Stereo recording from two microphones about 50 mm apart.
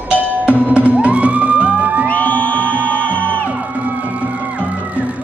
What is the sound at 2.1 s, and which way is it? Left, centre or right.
Music, left.